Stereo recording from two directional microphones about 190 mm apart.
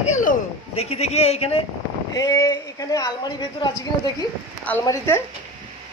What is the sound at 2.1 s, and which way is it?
A woman's voice, 20° left (ahead or behind).